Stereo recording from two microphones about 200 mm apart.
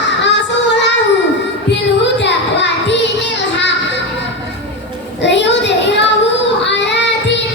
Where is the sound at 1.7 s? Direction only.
60° left (ahead or behind).